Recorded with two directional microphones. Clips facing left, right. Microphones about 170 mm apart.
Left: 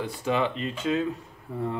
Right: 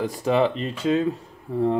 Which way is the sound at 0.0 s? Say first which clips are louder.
Right 6 dB; 40° right (ahead or behind).